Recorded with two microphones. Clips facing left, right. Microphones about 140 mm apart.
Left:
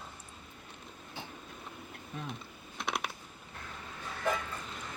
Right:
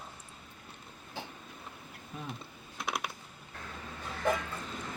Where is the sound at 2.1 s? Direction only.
5° right (ahead or behind).